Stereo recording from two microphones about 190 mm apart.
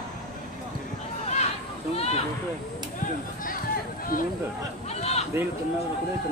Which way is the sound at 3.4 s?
45° left (ahead or behind).